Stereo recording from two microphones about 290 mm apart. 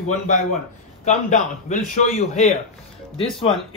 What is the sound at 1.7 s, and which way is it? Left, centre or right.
Speech, left.